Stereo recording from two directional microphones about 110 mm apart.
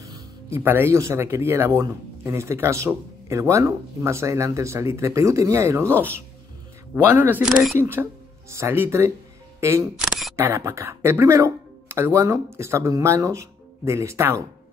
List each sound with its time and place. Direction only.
0.0 s speech: 30° right (ahead or behind)
9.9 s single-lens reflex camera: centre (ahead or behind)
10.3 s speech: 25° right (ahead or behind)